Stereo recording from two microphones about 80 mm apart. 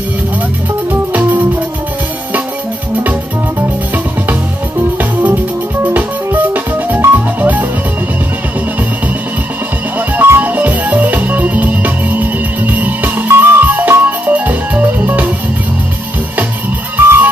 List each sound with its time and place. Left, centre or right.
4.9 s music: right
9.9 s music: right
16.9 s music: right